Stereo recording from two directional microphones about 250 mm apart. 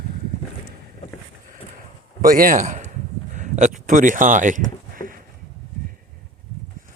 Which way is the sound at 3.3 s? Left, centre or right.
Right.